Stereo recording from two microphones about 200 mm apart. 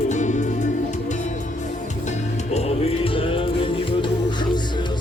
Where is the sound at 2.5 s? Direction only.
30° left (ahead or behind).